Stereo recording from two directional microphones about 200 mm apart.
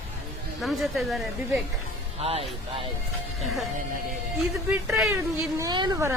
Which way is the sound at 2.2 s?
30° right (ahead or behind).